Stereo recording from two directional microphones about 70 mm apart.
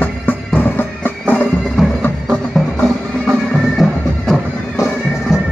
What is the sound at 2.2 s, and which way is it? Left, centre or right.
Music, centre.